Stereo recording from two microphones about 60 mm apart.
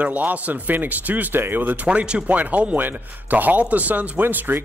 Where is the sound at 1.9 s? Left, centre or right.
Centre.